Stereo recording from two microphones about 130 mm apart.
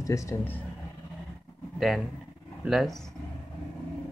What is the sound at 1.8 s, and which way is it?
Speech, centre (ahead or behind).